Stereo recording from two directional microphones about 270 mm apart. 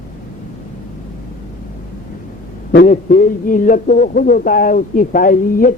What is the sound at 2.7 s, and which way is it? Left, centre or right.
A man's voice, left.